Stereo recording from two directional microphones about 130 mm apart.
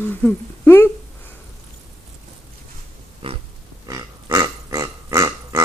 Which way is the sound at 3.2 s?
45° right (ahead or behind).